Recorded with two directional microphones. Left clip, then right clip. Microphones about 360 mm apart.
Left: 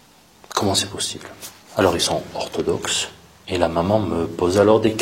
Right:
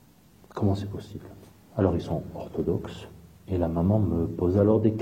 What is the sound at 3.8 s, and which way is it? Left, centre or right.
A man's voice, centre.